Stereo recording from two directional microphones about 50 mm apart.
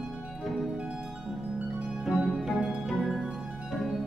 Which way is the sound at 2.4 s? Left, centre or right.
Centre.